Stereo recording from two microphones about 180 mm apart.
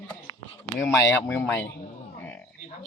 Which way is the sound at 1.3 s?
10° left (ahead or behind).